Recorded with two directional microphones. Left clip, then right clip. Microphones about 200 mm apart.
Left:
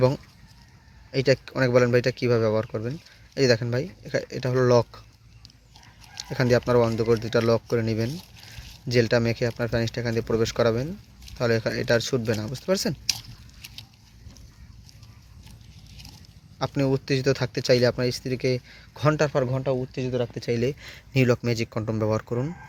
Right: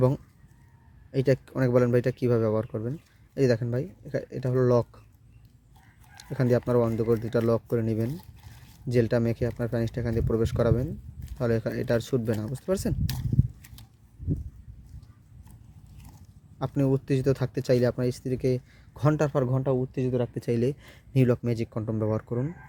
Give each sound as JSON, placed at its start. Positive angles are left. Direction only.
{"t": 1.1, "sound": "speech", "side_deg": -20}
{"t": 6.3, "sound": "speech", "side_deg": -15}
{"t": 16.6, "sound": "speech", "side_deg": -15}